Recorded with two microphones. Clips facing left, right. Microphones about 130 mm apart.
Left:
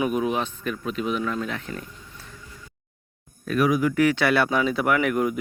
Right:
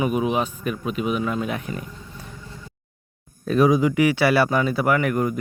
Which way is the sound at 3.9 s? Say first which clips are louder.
Right 2 dB; 10° right (ahead or behind).